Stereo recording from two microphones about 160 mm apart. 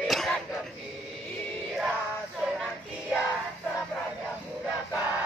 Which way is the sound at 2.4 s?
Centre (ahead or behind).